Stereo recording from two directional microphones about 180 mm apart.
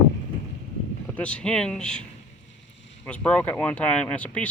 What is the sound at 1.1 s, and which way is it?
Speech, 5° left (ahead or behind).